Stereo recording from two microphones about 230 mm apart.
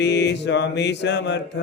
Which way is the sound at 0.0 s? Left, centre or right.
Left.